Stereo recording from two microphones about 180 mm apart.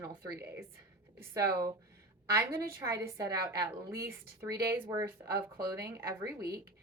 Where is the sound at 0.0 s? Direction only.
20° right (ahead or behind).